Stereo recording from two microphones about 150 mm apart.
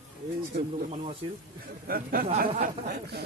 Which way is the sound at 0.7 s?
45° right (ahead or behind).